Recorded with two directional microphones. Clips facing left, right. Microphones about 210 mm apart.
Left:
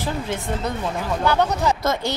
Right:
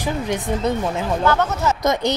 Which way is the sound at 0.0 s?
15° right (ahead or behind).